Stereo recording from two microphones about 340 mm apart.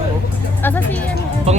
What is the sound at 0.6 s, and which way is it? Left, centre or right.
Speech, centre.